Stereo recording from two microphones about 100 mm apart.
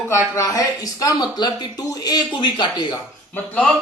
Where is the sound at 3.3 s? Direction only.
15° left (ahead or behind).